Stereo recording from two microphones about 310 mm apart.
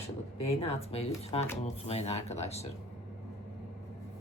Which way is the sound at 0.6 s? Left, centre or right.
Centre.